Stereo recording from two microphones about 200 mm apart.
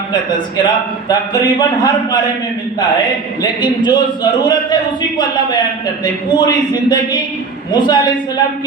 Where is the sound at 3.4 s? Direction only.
20° left (ahead or behind).